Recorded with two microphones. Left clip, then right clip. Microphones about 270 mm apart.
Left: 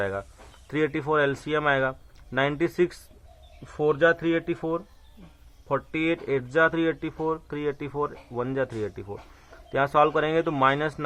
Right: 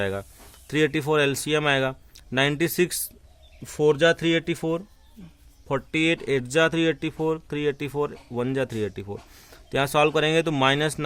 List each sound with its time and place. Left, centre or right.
0.0 s speech: right